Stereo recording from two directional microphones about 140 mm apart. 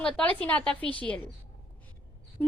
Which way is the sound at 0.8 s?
35° right (ahead or behind).